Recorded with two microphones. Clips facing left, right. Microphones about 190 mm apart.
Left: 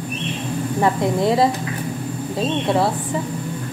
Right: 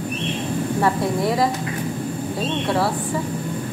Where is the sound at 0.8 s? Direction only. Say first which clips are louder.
Left 3 dB; 25° left (ahead or behind).